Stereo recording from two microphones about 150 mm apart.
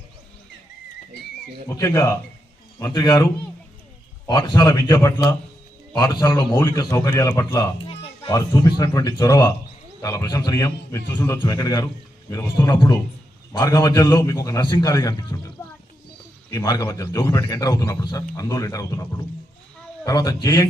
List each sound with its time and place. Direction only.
1.7 s a man's voice: 20° left (ahead or behind)
4.3 s a man's voice: 25° left (ahead or behind)
7.9 s music: 40° left (ahead or behind)
8.3 s a man's voice: 25° left (ahead or behind)